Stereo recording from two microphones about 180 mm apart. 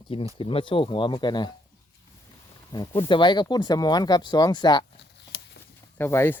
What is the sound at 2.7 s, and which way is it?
Speech, 25° left (ahead or behind).